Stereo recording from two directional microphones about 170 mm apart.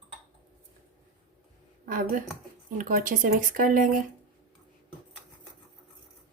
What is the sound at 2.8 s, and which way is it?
Speech, 50° right (ahead or behind).